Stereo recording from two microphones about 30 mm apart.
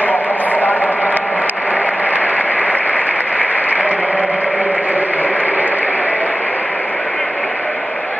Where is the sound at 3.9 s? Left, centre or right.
Right.